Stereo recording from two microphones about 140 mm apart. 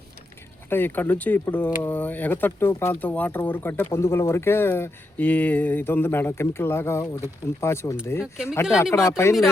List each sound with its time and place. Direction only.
0.7 s speech: 15° left (ahead or behind)
8.2 s speech: 5° right (ahead or behind)
9.0 s speech: 20° left (ahead or behind)